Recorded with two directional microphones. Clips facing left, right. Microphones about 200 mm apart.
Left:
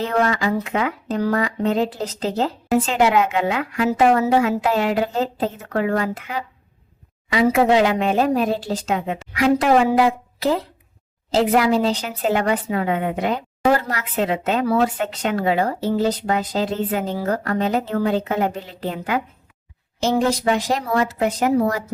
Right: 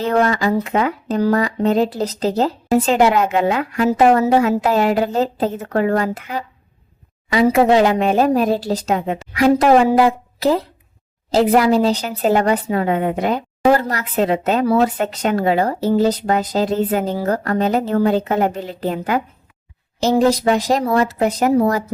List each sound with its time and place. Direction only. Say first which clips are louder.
0.0 s speech: right 3 dB; 40° right (ahead or behind)